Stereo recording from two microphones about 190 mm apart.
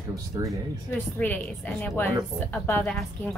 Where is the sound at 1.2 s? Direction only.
10° left (ahead or behind).